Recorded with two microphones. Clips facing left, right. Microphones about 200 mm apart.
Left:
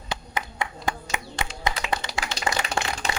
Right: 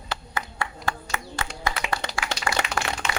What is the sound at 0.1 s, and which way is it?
Clapping, 15° left (ahead or behind).